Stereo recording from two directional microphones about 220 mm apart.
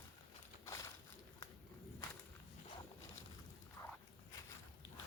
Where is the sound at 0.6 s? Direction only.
15° left (ahead or behind).